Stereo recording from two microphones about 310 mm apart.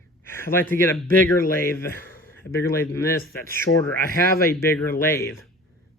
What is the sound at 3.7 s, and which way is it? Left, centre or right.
Speech, left.